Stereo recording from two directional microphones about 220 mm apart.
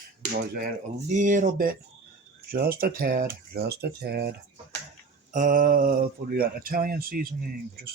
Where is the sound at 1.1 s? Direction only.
35° right (ahead or behind).